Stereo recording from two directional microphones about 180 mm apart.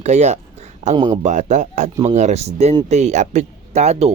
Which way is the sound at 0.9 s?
25° right (ahead or behind).